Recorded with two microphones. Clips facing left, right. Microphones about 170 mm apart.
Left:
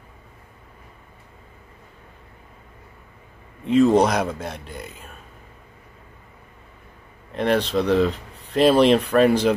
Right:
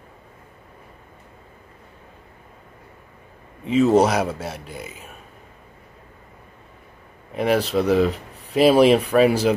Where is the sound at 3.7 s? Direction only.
5° right (ahead or behind).